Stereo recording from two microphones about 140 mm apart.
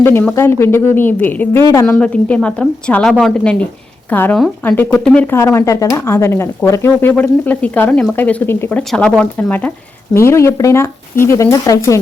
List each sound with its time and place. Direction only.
0.0 s speech: 15° left (ahead or behind)
2.0 s speech: 10° left (ahead or behind); by 11.9 s 25° left (ahead or behind)